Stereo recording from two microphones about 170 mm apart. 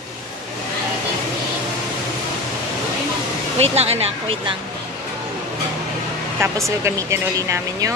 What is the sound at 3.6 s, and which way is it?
Speech, 35° right (ahead or behind).